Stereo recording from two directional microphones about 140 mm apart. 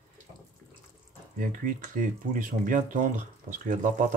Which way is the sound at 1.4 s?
75° right (ahead or behind).